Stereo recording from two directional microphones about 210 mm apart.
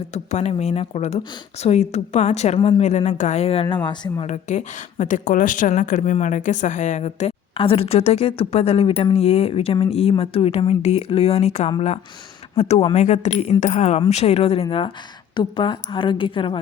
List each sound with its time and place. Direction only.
0.1 s a woman's voice: 30° left (ahead or behind)